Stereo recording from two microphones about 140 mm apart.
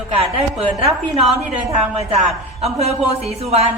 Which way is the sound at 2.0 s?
50° right (ahead or behind).